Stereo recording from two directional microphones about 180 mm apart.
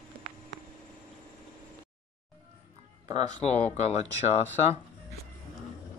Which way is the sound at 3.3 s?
40° left (ahead or behind).